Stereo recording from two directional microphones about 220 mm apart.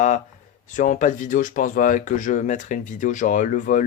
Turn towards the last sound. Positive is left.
turn(degrees=35)  # may be behind; listen again after turning